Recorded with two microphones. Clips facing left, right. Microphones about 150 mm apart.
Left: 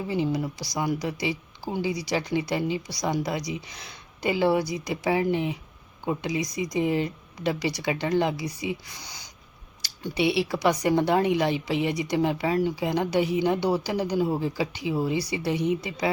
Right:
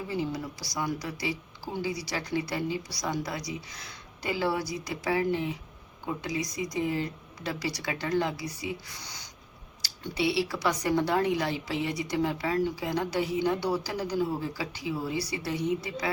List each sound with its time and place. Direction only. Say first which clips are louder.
0.1 s speech: left 6 dB; 15° left (ahead or behind)